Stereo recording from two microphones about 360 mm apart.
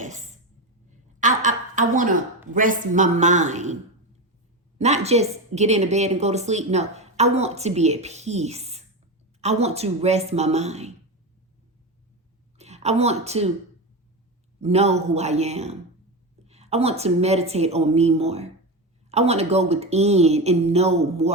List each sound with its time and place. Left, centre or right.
0.0 s a sound: centre
2.5 s a man's voice: right
4.8 s a woman's voice: centre
12.5 s a woman's voice: centre
14.6 s a woman's voice: centre